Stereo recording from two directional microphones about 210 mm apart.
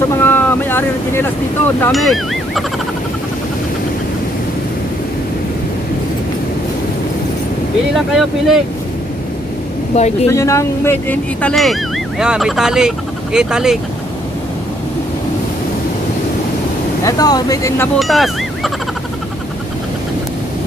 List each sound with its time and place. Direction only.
0.1 s speech: 10° left (ahead or behind)
7.9 s speech: centre (ahead or behind)
9.9 s speech: 30° left (ahead or behind)
10.3 s speech: 15° left (ahead or behind); by 13.7 s 5° right (ahead or behind)
17.0 s speech: 15° left (ahead or behind)
17.9 s speech: centre (ahead or behind)